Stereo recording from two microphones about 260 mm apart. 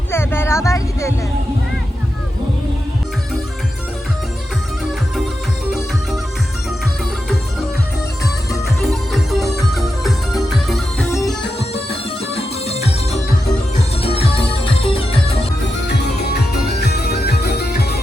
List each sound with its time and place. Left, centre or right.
0.1 s a sound: centre
8.8 s music: centre
11.7 s music: left
14.0 s music: left
16.6 s music: left